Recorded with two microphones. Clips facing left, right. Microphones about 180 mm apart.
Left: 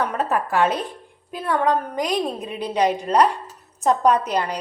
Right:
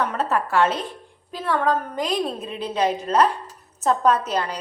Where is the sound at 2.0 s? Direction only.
15° left (ahead or behind).